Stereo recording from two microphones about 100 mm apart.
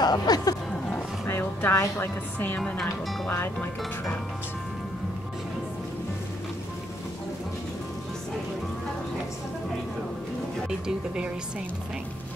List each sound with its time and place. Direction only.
0.0 s speech: 40° left (ahead or behind)
1.2 s a woman's voice: 20° left (ahead or behind)
2.6 s speech: 5° left (ahead or behind)